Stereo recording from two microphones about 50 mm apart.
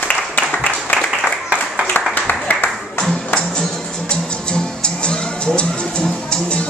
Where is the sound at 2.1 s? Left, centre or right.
Left.